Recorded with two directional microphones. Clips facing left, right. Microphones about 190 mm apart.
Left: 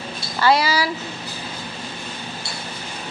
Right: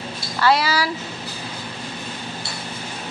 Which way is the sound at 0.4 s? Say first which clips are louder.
Left 1 dB; centre (ahead or behind).